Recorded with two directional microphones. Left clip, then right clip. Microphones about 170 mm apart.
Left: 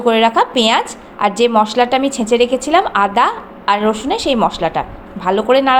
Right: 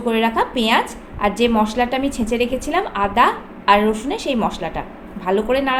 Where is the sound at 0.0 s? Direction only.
25° left (ahead or behind).